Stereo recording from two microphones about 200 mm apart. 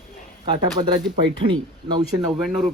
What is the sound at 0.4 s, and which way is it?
Speech, 20° right (ahead or behind).